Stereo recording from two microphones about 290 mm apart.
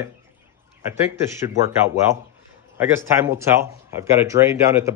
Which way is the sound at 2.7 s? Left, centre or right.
Centre.